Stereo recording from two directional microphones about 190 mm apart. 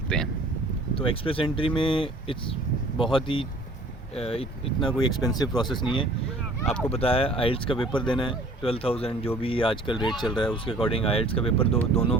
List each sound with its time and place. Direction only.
0.1 s speech: 5° left (ahead or behind)
0.9 s speech: 30° left (ahead or behind)